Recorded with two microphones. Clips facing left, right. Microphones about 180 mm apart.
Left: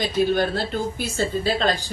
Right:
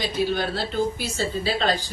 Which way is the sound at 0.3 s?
50° left (ahead or behind).